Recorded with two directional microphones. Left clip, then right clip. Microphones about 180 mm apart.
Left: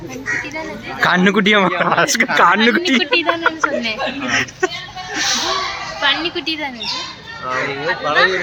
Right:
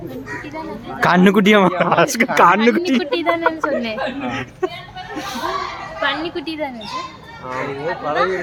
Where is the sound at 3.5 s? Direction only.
40° right (ahead or behind).